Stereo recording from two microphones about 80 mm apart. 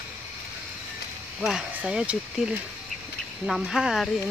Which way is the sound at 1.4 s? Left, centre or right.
Centre.